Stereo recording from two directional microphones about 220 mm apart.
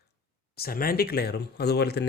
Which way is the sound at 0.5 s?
45° left (ahead or behind).